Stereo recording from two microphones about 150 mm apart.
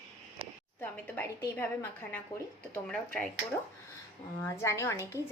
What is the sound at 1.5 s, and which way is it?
A woman's voice, 10° left (ahead or behind).